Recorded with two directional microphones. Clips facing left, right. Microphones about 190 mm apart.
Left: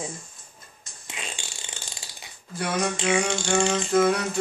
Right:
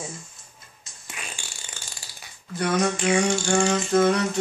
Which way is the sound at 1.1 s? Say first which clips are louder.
Left 2 dB; 20° left (ahead or behind).